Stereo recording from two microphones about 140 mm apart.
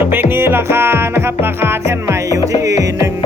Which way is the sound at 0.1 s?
15° right (ahead or behind).